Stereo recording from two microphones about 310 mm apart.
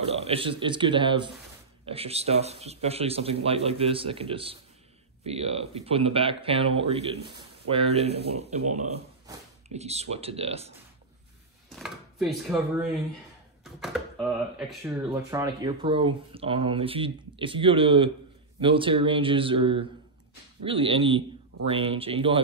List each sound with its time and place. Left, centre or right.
0.1 s speech: centre
11.7 s speech: centre